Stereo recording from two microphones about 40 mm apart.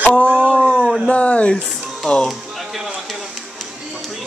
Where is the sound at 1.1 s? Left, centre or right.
Left.